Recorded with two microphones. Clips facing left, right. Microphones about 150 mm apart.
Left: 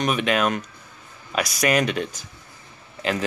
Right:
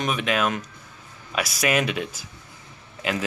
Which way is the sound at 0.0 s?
Centre (ahead or behind).